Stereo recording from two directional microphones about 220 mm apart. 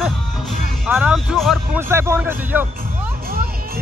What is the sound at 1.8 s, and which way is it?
Speech, 10° right (ahead or behind).